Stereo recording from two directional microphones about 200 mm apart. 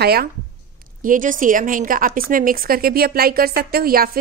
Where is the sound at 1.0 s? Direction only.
40° right (ahead or behind).